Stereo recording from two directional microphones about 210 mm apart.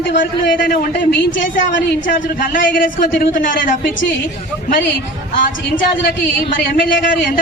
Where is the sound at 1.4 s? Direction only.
60° left (ahead or behind).